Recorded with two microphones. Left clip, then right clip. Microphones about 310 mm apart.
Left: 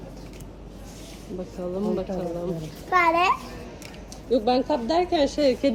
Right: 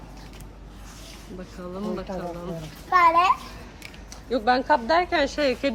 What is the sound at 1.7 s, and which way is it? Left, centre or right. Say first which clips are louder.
Speech: left 4 dB; centre.